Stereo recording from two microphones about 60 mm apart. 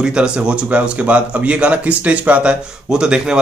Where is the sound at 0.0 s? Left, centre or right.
Centre.